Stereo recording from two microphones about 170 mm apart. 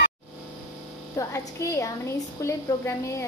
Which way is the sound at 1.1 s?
15° left (ahead or behind).